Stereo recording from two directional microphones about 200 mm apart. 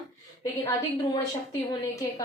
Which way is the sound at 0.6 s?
15° left (ahead or behind).